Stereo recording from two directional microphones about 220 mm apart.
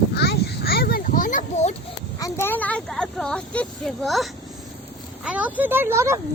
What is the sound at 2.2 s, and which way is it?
A child's voice, 15° left (ahead or behind).